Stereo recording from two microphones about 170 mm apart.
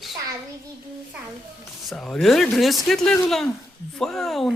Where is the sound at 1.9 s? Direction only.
5° left (ahead or behind).